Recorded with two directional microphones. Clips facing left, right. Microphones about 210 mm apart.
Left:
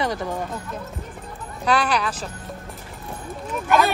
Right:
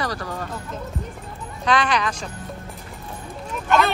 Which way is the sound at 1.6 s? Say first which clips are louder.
Even; 10° left (ahead or behind).